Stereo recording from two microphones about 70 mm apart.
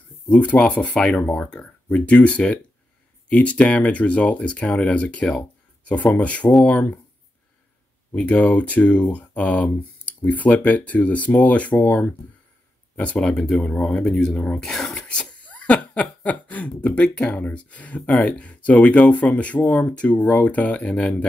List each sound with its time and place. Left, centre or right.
0.3 s speech: centre
3.3 s laughter: centre
8.1 s laughter: centre
12.9 s speech: centre
14.6 s speech: centre
15.0 s laughter: centre